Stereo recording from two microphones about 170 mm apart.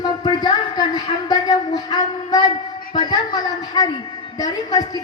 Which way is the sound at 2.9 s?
25° left (ahead or behind).